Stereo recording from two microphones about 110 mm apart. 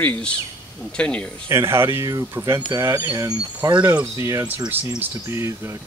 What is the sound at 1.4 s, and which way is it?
Speech, 25° right (ahead or behind).